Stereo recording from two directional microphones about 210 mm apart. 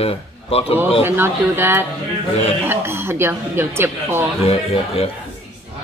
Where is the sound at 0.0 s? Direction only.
30° left (ahead or behind).